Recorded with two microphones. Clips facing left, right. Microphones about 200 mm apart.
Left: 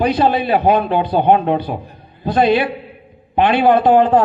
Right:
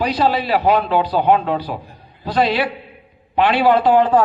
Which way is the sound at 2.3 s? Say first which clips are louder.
Left 4 dB; 50° left (ahead or behind).